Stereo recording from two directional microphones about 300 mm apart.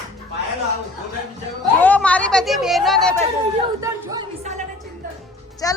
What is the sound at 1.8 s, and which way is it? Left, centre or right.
Chatter, centre.